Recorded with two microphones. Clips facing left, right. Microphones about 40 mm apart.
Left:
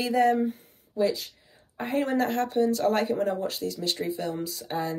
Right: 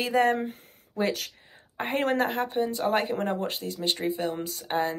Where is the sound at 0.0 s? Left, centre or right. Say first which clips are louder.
Left 1 dB; right.